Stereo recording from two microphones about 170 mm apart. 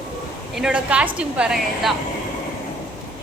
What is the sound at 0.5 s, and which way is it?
A woman's voice, 5° right (ahead or behind).